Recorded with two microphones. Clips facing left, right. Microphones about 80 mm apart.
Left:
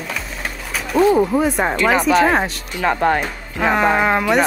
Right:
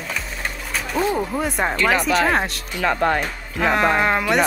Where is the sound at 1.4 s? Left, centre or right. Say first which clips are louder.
Left 4 dB; centre.